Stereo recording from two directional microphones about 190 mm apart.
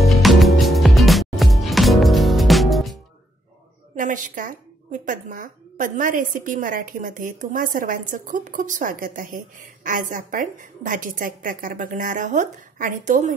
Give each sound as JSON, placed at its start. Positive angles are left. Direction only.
{"t": 0.0, "sound": "music", "side_deg": 0}
{"t": 3.9, "sound": "speech", "side_deg": -45}